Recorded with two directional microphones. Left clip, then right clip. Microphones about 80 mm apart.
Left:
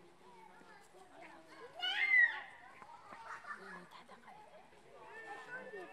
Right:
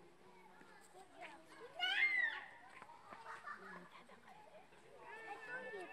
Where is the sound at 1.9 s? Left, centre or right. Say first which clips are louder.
Left 7 dB; left.